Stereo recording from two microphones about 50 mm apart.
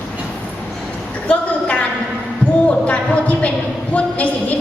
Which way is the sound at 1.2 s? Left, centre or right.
Left.